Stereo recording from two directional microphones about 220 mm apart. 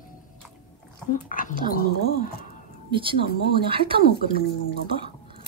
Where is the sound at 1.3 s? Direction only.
40° left (ahead or behind).